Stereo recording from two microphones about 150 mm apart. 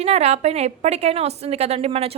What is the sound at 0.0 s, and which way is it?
A woman's voice, 45° right (ahead or behind).